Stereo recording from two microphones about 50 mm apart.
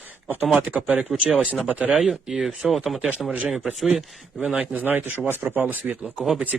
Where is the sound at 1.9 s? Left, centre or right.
Centre.